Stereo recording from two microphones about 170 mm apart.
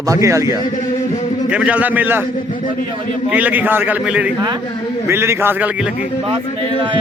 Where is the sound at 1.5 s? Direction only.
5° right (ahead or behind).